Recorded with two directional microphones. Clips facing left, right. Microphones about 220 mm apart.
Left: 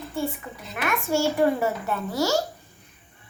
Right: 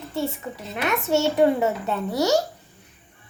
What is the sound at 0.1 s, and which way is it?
A child's voice, 25° right (ahead or behind).